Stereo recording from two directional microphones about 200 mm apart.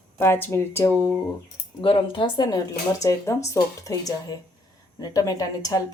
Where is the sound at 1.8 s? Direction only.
25° left (ahead or behind).